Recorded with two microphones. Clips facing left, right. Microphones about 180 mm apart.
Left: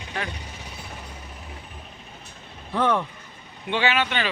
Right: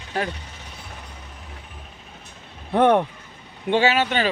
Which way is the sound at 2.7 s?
60° right (ahead or behind).